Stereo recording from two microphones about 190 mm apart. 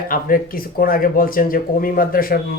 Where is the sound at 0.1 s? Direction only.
50° left (ahead or behind).